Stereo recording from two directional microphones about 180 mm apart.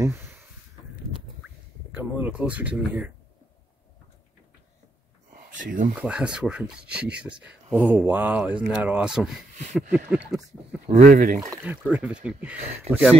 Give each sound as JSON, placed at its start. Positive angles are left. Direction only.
{"t": 0.0, "sound": "a sound", "side_deg": -15}
{"t": 2.0, "sound": "speech", "side_deg": -10}
{"t": 5.3, "sound": "a sound", "side_deg": -50}
{"t": 5.9, "sound": "speech", "side_deg": -5}
{"t": 10.9, "sound": "speech", "side_deg": -45}
{"t": 11.6, "sound": "speech", "side_deg": -5}
{"t": 12.5, "sound": "speech", "side_deg": -35}